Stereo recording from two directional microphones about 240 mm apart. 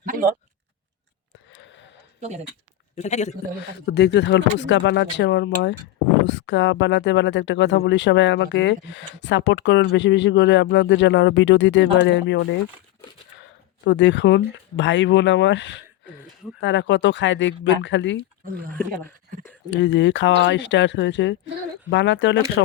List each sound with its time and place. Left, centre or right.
0.0 s a sound: right
1.5 s wheeze: left
2.9 s a man's voice: left
3.6 s speech: left
13.8 s speech: left
18.7 s speech: centre
19.7 s speech: left